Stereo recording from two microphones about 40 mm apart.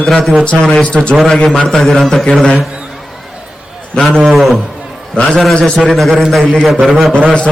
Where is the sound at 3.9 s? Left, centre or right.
Centre.